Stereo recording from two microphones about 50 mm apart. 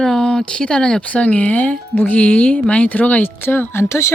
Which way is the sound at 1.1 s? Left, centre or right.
Left.